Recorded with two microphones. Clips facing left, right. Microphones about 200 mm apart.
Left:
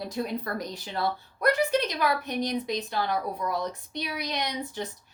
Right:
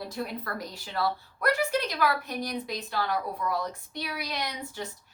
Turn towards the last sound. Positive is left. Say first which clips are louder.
# left 3 dB
turn(degrees=20)  # may be behind; listen again after turning